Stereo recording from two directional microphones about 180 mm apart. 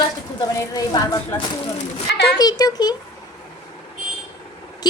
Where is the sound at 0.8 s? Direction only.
20° left (ahead or behind).